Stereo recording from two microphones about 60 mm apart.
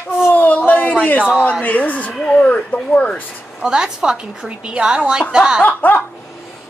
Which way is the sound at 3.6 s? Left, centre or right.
Centre.